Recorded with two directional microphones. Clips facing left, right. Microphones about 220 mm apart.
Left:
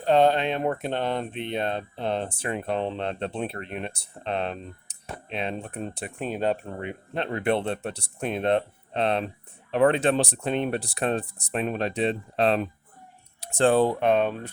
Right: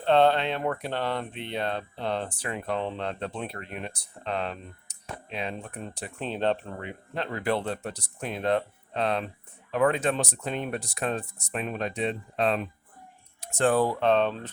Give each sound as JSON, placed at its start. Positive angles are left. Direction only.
{"t": 0.0, "sound": "speech", "side_deg": 15}
{"t": 6.1, "sound": "speech", "side_deg": 10}
{"t": 6.7, "sound": "speech", "side_deg": 25}